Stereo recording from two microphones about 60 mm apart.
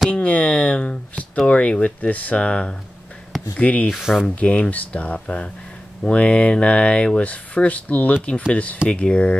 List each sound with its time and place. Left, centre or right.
0.1 s speech: left
4.0 s speech: centre
4.4 s speech: left